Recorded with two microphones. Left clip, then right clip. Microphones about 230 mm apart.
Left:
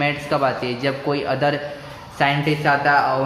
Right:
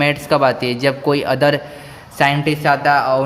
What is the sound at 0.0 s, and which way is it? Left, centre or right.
A man's voice, right.